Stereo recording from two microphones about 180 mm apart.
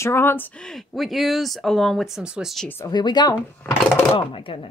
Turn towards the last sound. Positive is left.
turn(degrees=30)  # may be behind; listen again after turning